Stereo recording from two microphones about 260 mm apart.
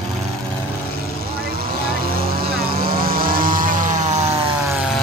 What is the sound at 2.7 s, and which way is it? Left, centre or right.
Vehicle, right.